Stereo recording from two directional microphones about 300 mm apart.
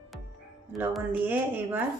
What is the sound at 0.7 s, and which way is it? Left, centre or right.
Speech, centre.